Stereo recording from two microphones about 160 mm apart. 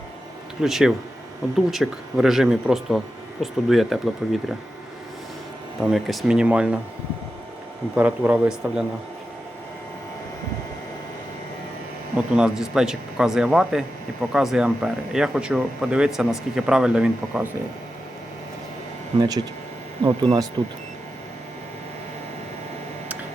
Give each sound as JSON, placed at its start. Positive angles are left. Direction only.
{"t": 0.6, "sound": "speech", "side_deg": -5}
{"t": 5.8, "sound": "speech", "side_deg": 0}
{"t": 7.9, "sound": "a man's voice", "side_deg": -10}
{"t": 12.1, "sound": "speech", "side_deg": -5}
{"t": 19.2, "sound": "speech", "side_deg": -25}